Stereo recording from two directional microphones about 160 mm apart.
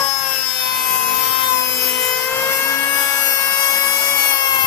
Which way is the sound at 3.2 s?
25° left (ahead or behind).